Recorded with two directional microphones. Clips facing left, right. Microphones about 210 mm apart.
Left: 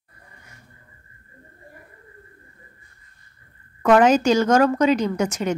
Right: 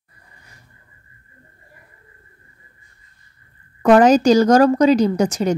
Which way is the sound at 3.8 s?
35° right (ahead or behind).